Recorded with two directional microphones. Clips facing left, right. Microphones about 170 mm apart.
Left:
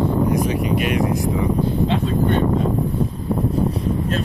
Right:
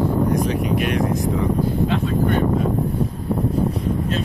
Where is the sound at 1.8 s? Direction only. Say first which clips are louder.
Left 1 dB; 20° left (ahead or behind).